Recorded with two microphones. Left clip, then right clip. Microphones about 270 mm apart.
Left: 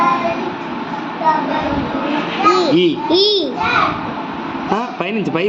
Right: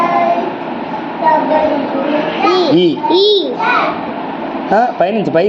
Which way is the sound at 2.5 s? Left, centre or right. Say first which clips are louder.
Right 1 dB; centre.